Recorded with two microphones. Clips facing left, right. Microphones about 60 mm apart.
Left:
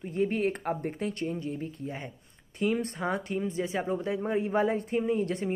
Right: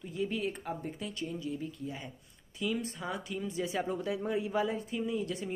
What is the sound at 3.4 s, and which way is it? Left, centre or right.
Speech, left.